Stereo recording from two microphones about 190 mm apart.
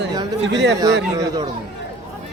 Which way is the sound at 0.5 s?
65° right (ahead or behind).